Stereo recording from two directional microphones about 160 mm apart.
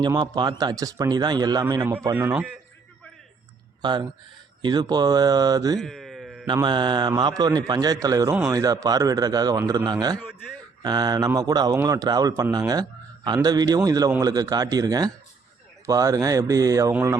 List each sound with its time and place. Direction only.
0.0 s a man's voice: 25° right (ahead or behind)
2.1 s a man's voice: 10° right (ahead or behind)
3.8 s a man's voice: 30° right (ahead or behind)
5.8 s a sound: centre (ahead or behind)
6.5 s a man's voice: 30° right (ahead or behind); by 17.2 s 10° right (ahead or behind)